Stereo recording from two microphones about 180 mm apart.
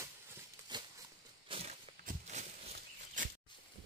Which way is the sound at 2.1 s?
40° right (ahead or behind).